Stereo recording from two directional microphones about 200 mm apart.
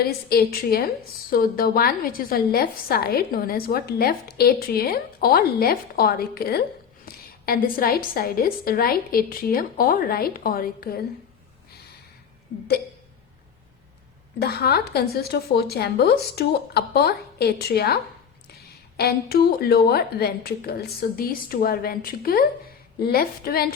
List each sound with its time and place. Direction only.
0.0 s a woman's voice: 50° left (ahead or behind)
14.4 s a woman's voice: 50° left (ahead or behind)